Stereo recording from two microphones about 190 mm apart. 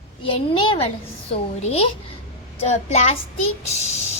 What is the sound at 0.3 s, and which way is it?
A child's voice, 30° left (ahead or behind).